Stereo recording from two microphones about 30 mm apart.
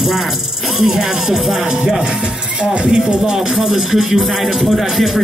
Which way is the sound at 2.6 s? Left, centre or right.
Right.